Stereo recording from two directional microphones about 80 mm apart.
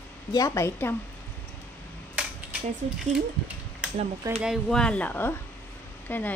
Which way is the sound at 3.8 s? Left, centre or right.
Centre.